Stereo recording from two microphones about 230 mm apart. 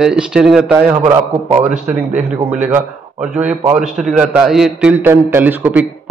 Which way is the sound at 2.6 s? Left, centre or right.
Centre.